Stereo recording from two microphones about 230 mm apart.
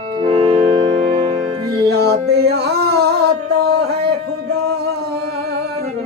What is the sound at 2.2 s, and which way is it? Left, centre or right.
Music, right.